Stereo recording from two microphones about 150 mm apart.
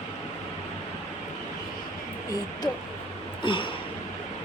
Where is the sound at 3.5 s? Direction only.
35° left (ahead or behind).